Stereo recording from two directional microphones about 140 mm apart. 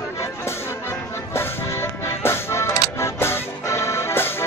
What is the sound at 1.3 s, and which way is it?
Music, 20° left (ahead or behind).